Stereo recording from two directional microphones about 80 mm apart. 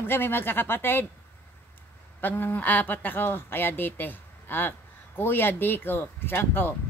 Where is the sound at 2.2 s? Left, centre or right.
Left.